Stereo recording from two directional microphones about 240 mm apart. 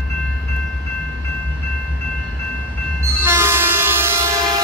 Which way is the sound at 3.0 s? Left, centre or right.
Centre.